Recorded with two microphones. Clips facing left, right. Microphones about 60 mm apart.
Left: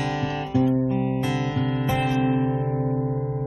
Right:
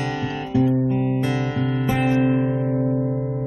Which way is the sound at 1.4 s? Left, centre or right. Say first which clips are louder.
Right 2 dB; centre.